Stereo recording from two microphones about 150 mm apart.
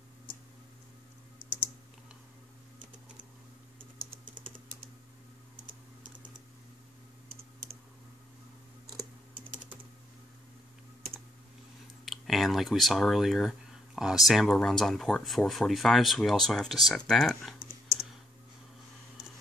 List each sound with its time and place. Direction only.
4.1 s typing: 35° right (ahead or behind)
12.0 s speech: centre (ahead or behind)